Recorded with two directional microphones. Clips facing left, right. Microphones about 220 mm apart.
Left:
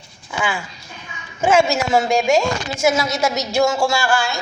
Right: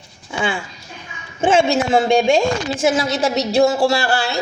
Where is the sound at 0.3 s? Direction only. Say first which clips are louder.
Right 2 dB; 30° right (ahead or behind).